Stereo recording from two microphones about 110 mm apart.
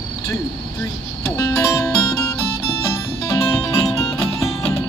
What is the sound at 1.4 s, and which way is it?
Music, 30° left (ahead or behind).